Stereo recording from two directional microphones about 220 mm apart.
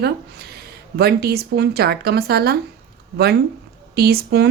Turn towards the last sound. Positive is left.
turn(degrees=-45)  # may be behind; listen again after turning